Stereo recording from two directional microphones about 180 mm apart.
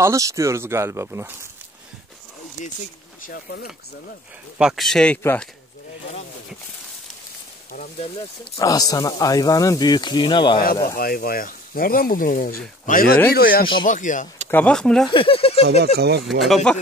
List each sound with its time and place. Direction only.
0.0 s speech: 15° right (ahead or behind)
3.3 s speech: 60° left (ahead or behind)
4.6 s speech: centre (ahead or behind)
7.7 s speech: 45° left (ahead or behind)
8.5 s speech: 20° left (ahead or behind)
11.0 s speech: 55° left (ahead or behind)
14.5 s speech: 5° left (ahead or behind)
15.0 s speech: 30° left (ahead or behind)
16.3 s speech: centre (ahead or behind)